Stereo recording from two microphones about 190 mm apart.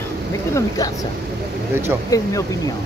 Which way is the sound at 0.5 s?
20° left (ahead or behind).